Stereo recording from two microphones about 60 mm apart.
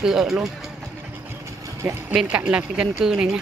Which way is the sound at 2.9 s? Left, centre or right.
Centre.